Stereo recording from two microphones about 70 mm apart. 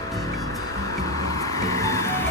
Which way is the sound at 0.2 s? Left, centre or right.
Left.